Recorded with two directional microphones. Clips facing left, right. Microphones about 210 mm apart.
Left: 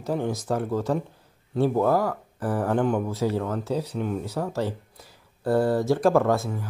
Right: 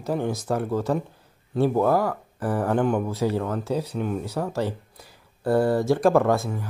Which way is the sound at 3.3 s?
5° left (ahead or behind).